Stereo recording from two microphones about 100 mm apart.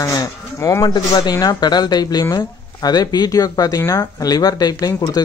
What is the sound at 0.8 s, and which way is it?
Speech, 50° left (ahead or behind).